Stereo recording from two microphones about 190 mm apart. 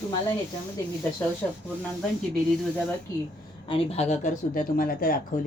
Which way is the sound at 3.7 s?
30° left (ahead or behind).